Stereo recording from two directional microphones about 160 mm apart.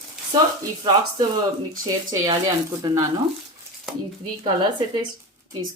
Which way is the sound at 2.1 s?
25° right (ahead or behind).